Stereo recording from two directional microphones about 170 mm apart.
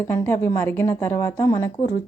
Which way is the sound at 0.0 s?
15° left (ahead or behind).